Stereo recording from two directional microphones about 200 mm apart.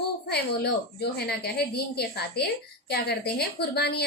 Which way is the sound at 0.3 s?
55° left (ahead or behind).